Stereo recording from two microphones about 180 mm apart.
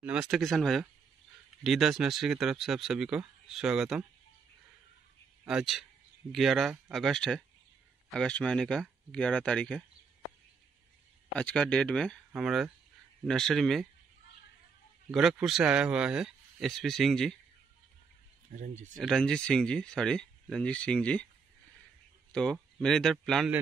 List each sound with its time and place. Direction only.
0.0 s speech: 5° right (ahead or behind)
5.5 s speech: centre (ahead or behind)
11.3 s speech: 5° left (ahead or behind)
15.0 s speech: centre (ahead or behind)
18.5 s speech: 45° right (ahead or behind)
18.9 s speech: 5° left (ahead or behind)
22.3 s speech: 5° left (ahead or behind)